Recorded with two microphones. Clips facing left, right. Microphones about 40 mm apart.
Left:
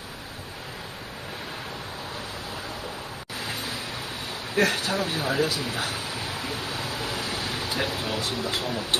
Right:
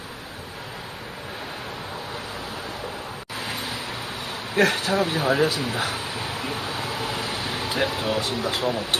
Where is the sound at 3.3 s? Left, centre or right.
Right.